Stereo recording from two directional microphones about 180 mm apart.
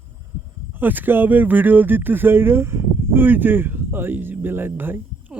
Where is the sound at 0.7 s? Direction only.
10° right (ahead or behind).